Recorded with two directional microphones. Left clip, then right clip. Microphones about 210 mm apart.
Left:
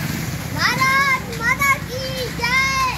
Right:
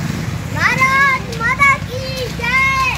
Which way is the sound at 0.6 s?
Centre (ahead or behind).